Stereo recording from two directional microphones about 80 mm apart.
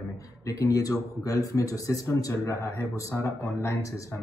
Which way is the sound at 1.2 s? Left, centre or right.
Left.